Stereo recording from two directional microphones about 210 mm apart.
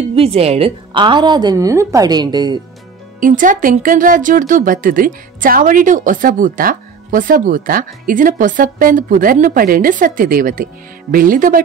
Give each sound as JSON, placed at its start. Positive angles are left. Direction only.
{"t": 0.1, "sound": "a woman's voice", "side_deg": -30}
{"t": 3.2, "sound": "speech", "side_deg": -40}